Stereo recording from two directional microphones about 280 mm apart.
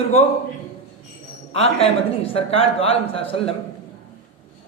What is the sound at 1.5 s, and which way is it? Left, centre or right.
A man's voice, left.